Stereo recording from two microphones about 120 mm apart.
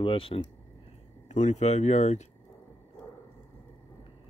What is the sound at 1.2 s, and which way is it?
Speech, 75° left (ahead or behind).